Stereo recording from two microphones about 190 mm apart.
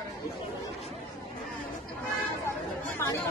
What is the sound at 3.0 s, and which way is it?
Speech, 15° left (ahead or behind).